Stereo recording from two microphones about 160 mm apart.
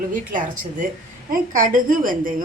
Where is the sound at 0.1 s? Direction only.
55° right (ahead or behind).